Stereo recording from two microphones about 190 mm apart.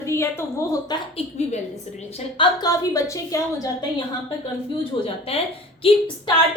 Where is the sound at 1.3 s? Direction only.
35° left (ahead or behind).